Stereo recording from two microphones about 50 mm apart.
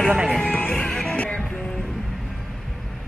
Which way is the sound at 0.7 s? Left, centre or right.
Centre.